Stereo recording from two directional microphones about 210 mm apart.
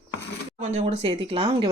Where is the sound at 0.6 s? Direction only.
30° right (ahead or behind).